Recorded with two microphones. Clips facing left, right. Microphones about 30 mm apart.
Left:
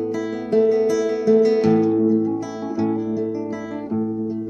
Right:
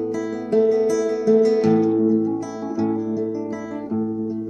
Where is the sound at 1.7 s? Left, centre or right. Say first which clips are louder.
Even; centre.